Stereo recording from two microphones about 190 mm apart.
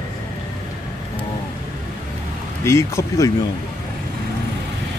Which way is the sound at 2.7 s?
15° left (ahead or behind).